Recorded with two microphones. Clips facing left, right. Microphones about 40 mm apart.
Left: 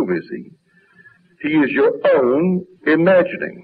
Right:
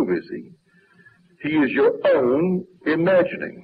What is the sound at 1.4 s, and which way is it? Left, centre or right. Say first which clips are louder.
Speech: left 3 dB; centre.